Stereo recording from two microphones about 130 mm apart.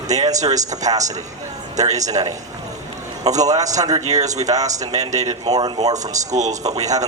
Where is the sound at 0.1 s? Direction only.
30° right (ahead or behind).